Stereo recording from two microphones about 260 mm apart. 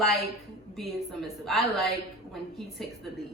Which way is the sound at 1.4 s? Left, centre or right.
Centre.